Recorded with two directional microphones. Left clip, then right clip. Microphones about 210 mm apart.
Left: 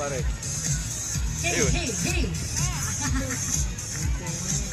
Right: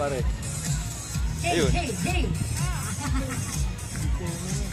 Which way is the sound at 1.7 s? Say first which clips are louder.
Even; 45° left (ahead or behind).